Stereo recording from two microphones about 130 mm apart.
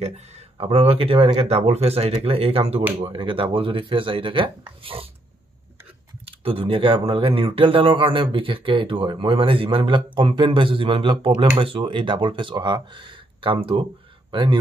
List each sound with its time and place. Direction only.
0.0 s speech: 50° right (ahead or behind)
6.2 s speech: 45° right (ahead or behind)